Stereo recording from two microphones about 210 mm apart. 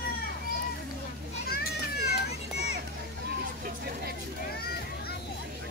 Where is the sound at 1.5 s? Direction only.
45° left (ahead or behind).